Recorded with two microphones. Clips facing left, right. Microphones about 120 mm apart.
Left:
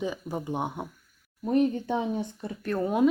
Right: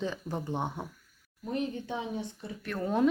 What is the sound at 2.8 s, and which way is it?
Speech, 10° left (ahead or behind).